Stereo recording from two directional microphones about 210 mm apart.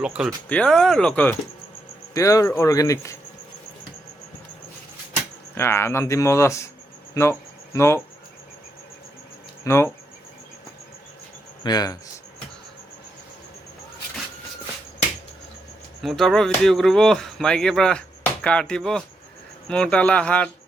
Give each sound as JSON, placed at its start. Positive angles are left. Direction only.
{"t": 0.0, "sound": "speech", "side_deg": -5}
{"t": 5.5, "sound": "speech", "side_deg": 10}
{"t": 7.1, "sound": "a sound", "side_deg": 15}
{"t": 9.6, "sound": "speech", "side_deg": 10}
{"t": 11.6, "sound": "speech", "side_deg": 20}
{"t": 16.0, "sound": "speech", "side_deg": 0}